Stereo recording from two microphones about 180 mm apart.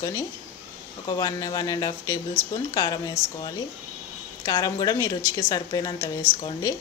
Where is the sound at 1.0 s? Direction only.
20° left (ahead or behind).